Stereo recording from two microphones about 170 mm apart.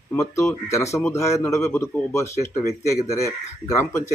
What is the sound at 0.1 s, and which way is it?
Speech, 15° left (ahead or behind).